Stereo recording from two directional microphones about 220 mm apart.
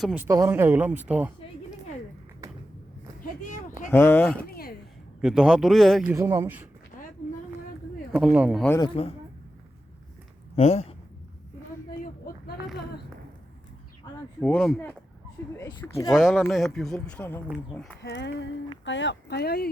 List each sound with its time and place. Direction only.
0.0 s speech: 10° right (ahead or behind)
3.2 s a sound: 35° left (ahead or behind)
3.8 s speech: 10° left (ahead or behind)
4.4 s a sound: 45° left (ahead or behind)
5.2 s a man's voice: centre (ahead or behind)
6.1 s speech: 10° right (ahead or behind)
7.0 s vehicle: 35° left (ahead or behind)
8.1 s a man's voice: 5° right (ahead or behind)
8.8 s speech: 25° left (ahead or behind)
10.5 s speech: 30° left (ahead or behind)
12.3 s a sound: 40° left (ahead or behind)
14.4 s a man's voice: 5° left (ahead or behind)
16.1 s a man's voice: centre (ahead or behind)
18.0 s speech: 50° left (ahead or behind)